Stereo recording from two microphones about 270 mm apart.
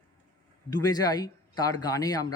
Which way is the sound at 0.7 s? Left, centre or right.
Centre.